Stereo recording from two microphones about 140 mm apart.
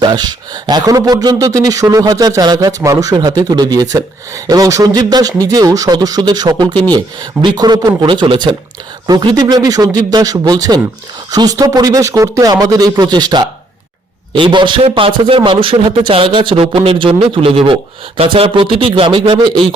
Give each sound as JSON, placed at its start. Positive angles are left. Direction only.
{"t": 0.0, "sound": "speech", "side_deg": -30}